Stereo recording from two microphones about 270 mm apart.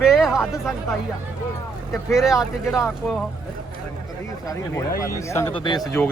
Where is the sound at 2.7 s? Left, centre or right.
Centre.